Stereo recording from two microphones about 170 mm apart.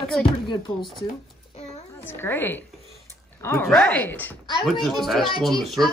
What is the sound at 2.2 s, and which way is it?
Speech, 15° left (ahead or behind).